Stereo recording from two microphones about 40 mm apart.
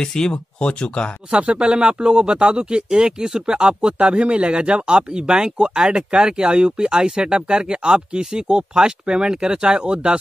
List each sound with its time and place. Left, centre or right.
0.0 s speech: centre
1.3 s speech: right